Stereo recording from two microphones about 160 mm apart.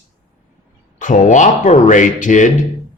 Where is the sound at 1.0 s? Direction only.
50° left (ahead or behind).